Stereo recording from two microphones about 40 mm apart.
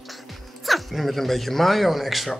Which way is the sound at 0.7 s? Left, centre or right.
Centre.